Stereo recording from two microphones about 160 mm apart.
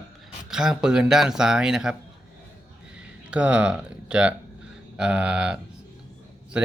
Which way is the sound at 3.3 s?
5° right (ahead or behind).